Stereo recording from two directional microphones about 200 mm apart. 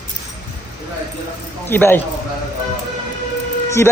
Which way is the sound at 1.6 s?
10° left (ahead or behind).